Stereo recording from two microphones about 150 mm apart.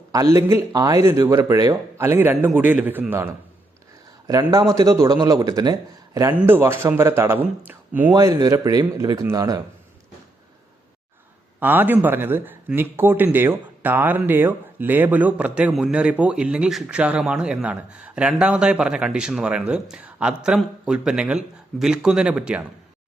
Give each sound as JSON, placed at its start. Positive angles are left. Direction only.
{"t": 0.1, "sound": "speech", "side_deg": -20}
{"t": 6.4, "sound": "speech", "side_deg": -15}
{"t": 8.1, "sound": "speech", "side_deg": -25}
{"t": 11.6, "sound": "speech", "side_deg": -15}